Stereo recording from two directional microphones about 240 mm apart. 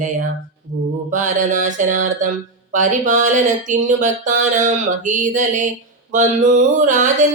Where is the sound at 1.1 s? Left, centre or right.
Right.